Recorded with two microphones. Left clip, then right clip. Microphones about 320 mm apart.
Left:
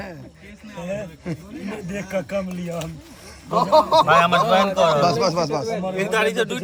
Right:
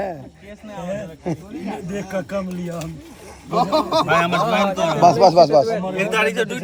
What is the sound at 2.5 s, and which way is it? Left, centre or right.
Speech, centre.